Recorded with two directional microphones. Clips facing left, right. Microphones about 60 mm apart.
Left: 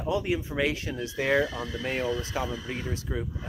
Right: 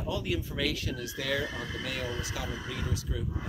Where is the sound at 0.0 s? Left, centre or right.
Left.